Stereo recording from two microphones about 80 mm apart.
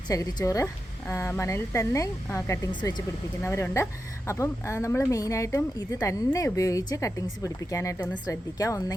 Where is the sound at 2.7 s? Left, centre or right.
Left.